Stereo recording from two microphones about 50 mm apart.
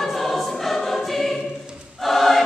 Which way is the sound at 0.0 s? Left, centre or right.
Centre.